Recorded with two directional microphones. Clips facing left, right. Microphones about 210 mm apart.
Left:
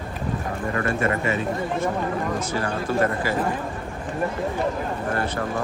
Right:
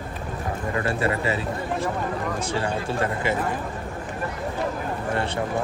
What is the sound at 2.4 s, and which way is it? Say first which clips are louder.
Speech: even; 30° right (ahead or behind).